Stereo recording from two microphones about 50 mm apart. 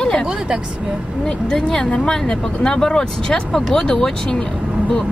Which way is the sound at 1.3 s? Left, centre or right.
Centre.